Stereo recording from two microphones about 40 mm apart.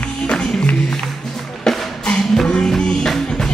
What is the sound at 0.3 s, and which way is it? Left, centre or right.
Music, centre.